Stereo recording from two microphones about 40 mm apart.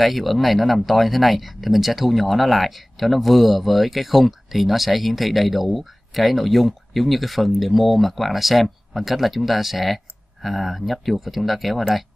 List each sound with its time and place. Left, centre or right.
0.0 s speech: centre